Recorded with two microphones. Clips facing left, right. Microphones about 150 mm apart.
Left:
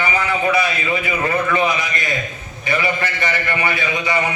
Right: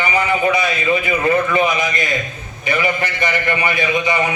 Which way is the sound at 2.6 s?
15° right (ahead or behind).